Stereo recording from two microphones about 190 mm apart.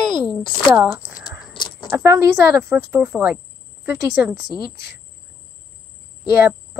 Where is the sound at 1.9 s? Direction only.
10° right (ahead or behind).